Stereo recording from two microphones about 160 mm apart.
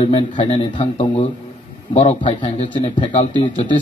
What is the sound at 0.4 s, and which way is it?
Speech, 30° left (ahead or behind).